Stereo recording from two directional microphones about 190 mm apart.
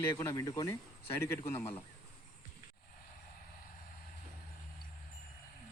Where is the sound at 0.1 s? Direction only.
15° left (ahead or behind).